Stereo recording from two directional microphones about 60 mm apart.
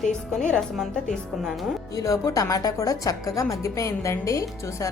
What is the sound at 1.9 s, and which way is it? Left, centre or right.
A woman's voice, left.